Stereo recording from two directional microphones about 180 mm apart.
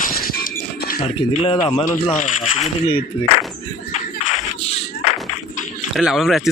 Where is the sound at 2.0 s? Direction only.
45° left (ahead or behind).